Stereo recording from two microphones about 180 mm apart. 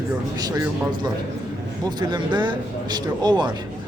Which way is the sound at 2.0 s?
25° right (ahead or behind).